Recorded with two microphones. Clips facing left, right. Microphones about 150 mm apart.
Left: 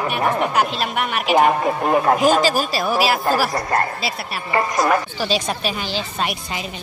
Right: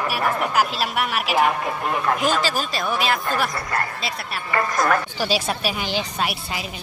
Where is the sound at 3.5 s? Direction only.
35° left (ahead or behind).